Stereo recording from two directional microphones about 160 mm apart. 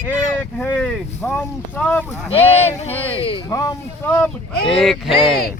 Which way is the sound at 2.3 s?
40° left (ahead or behind).